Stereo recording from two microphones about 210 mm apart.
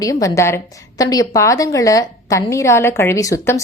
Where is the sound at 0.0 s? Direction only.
15° left (ahead or behind).